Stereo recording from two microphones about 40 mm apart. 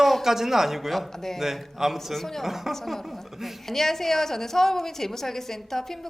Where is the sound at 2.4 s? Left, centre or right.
Centre.